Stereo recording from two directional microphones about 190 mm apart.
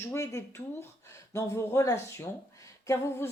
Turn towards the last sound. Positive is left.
turn(degrees=15)  # may be behind; listen again after turning